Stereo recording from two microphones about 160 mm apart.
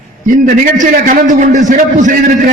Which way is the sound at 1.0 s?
55° right (ahead or behind).